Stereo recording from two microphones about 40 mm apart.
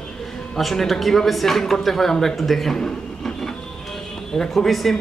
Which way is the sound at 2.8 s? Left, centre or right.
Centre.